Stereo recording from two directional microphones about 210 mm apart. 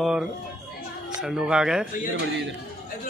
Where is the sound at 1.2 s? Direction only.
5° right (ahead or behind).